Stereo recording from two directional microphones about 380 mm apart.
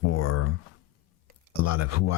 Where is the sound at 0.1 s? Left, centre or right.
Left.